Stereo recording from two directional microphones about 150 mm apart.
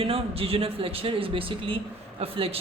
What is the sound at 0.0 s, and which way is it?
A man's voice, 40° right (ahead or behind).